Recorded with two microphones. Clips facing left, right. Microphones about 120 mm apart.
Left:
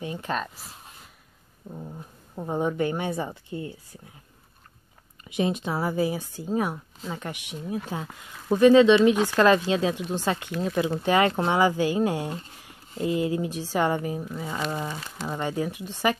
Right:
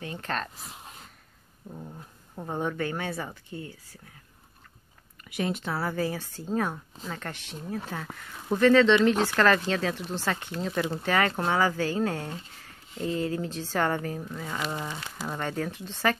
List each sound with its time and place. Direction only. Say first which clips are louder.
0.0 s speech: left 3 dB; 15° left (ahead or behind)
1.7 s speech: left 3 dB; 10° left (ahead or behind)
5.2 s speech: left 4 dB; 20° left (ahead or behind)